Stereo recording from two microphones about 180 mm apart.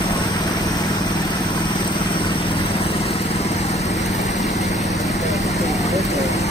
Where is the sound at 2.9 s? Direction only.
35° left (ahead or behind).